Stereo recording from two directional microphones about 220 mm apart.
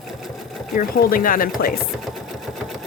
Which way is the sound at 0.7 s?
40° left (ahead or behind).